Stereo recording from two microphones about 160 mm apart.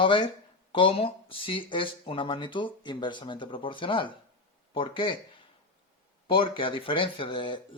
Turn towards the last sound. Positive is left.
turn(degrees=30)  # may be behind; listen again after turning